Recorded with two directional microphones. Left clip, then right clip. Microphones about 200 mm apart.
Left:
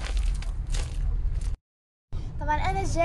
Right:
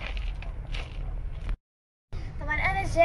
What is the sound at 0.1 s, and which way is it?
Crushing, 35° left (ahead or behind).